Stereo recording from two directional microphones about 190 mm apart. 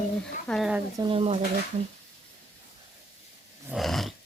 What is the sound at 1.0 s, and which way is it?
Speech, 30° right (ahead or behind).